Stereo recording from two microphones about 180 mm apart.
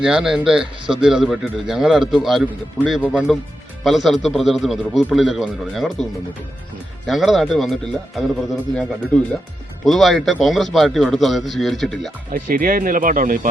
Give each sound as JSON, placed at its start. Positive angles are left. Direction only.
{"t": 0.0, "sound": "speech", "side_deg": -5}
{"t": 7.1, "sound": "speech", "side_deg": 0}
{"t": 12.3, "sound": "speech", "side_deg": -50}